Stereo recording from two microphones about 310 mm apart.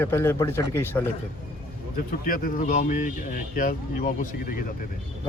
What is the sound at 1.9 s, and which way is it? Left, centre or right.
Speech, left.